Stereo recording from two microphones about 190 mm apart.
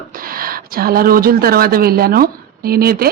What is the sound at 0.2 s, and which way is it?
A woman's voice, 50° right (ahead or behind).